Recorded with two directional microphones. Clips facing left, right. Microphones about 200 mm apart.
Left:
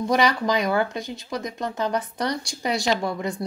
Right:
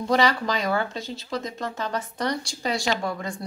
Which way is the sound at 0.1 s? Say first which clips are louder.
Left 1 dB; 15° left (ahead or behind).